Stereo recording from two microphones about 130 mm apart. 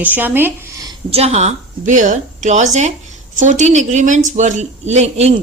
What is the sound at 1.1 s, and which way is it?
A woman's voice, 55° right (ahead or behind).